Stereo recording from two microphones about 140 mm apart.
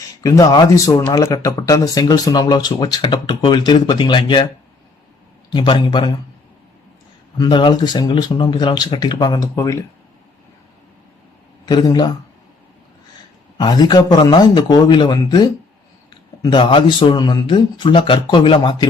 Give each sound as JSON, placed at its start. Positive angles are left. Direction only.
{"t": 0.2, "sound": "speech", "side_deg": 25}
{"t": 5.5, "sound": "speech", "side_deg": 35}
{"t": 7.3, "sound": "speech", "side_deg": 30}
{"t": 11.6, "sound": "speech", "side_deg": 30}
{"t": 13.6, "sound": "speech", "side_deg": 30}